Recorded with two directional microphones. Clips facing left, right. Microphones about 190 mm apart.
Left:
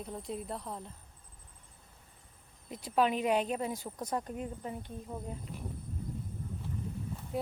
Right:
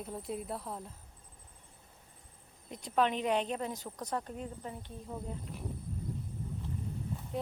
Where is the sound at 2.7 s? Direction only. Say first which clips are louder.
Left 1 dB; 5° left (ahead or behind).